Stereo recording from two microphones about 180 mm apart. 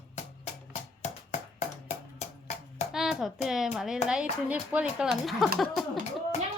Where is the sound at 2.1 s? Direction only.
40° left (ahead or behind).